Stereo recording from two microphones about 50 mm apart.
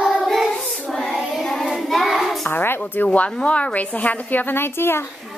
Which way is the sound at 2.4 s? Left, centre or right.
Left.